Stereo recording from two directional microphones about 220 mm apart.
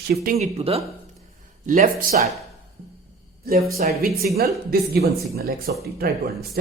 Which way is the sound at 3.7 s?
45° right (ahead or behind).